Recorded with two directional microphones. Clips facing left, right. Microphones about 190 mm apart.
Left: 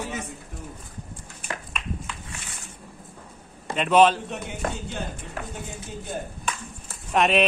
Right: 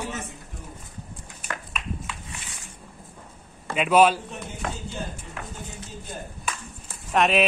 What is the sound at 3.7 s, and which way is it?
Speech, 5° right (ahead or behind).